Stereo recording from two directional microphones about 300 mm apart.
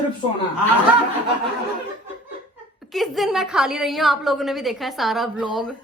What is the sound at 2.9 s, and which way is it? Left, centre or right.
A woman's voice, centre.